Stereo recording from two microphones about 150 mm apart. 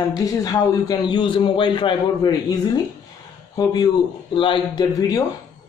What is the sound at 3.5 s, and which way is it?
Speech, 25° left (ahead or behind).